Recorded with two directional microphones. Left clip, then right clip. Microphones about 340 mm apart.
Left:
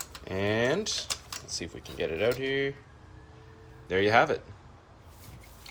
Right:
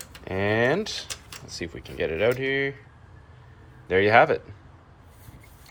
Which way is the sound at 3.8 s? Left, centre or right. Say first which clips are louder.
Right 5 dB; centre.